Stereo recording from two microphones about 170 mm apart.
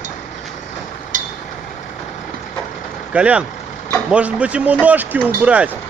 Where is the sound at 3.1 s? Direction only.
5° right (ahead or behind).